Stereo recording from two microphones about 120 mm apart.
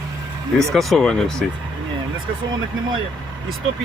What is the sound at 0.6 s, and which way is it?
Speech, centre (ahead or behind).